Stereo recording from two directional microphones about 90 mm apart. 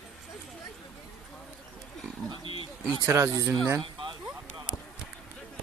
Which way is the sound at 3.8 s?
65° right (ahead or behind).